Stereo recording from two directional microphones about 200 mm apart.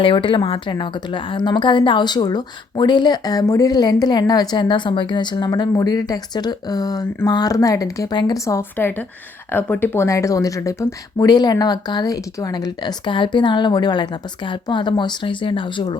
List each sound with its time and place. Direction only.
0.0 s a woman's voice: 25° left (ahead or behind)